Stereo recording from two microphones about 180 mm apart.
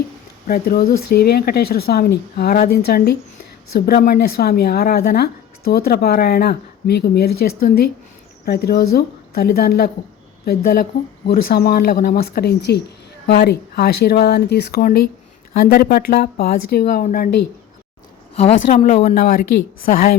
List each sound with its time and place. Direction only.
0.4 s speech: 55° left (ahead or behind)
18.8 s speech: 35° left (ahead or behind)
19.0 s speech: 45° left (ahead or behind)